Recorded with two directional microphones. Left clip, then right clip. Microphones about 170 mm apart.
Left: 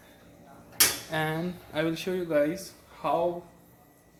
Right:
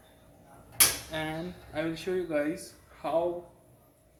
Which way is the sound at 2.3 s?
30° left (ahead or behind).